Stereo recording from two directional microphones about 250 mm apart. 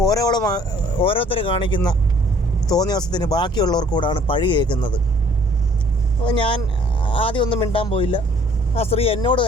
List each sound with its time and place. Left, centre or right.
0.0 s speech: centre
6.2 s speech: left